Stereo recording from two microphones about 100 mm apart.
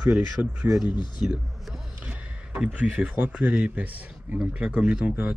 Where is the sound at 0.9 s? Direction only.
50° left (ahead or behind).